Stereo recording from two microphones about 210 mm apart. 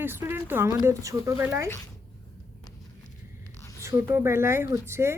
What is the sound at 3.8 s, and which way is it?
Speech, 10° right (ahead or behind).